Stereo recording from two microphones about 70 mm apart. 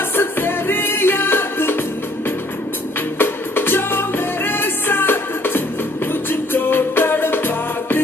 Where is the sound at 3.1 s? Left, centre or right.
Left.